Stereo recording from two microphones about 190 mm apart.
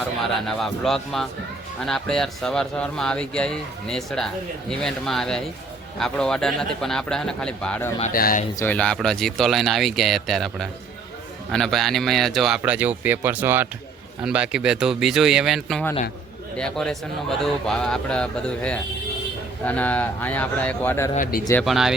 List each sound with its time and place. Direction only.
0.4 s speech: centre (ahead or behind)
8.1 s speech: 45° left (ahead or behind)
8.5 s speech: 10° left (ahead or behind)
21.6 s speech: centre (ahead or behind)